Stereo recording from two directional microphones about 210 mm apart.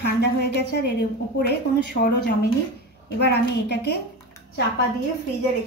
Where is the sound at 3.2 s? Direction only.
50° left (ahead or behind).